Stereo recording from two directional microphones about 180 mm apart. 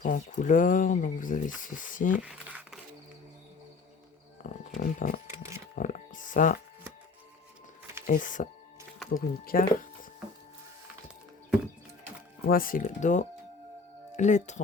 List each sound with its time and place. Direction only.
0.0 s speech: 45° left (ahead or behind)
2.2 s crumpling: 5° right (ahead or behind)
4.4 s speech: 50° left (ahead or behind)
5.3 s a sound: 15° right (ahead or behind)
5.7 s a sound: 45° left (ahead or behind)
8.0 s speech: 45° left (ahead or behind)
12.5 s speech: 50° left (ahead or behind)